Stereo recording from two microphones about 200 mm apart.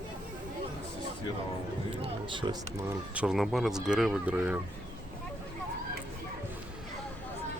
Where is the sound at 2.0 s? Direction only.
25° right (ahead or behind).